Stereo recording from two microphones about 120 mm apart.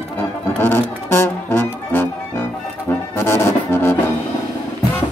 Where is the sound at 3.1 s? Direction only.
20° left (ahead or behind).